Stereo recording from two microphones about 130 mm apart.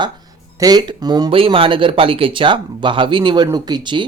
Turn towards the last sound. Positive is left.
turn(degrees=-35)  # may be behind; listen again after turning